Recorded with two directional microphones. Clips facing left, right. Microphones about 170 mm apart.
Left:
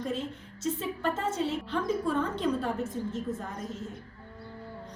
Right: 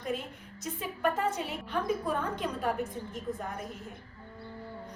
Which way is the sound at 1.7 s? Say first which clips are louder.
Right 1 dB; 10° right (ahead or behind).